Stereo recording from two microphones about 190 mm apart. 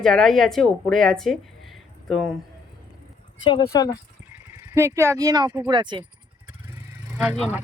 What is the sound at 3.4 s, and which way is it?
Speech, 20° left (ahead or behind).